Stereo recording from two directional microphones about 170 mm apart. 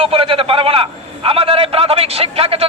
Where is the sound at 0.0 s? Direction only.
30° right (ahead or behind).